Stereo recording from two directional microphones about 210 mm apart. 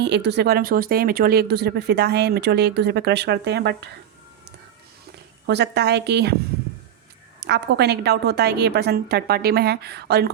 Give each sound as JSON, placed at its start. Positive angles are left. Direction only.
{"t": 0.0, "sound": "speech", "side_deg": -55}
{"t": 5.5, "sound": "speech", "side_deg": -55}
{"t": 7.3, "sound": "speech", "side_deg": -55}